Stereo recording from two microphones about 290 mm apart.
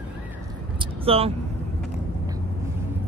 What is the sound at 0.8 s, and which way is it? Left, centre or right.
Vehicle, centre.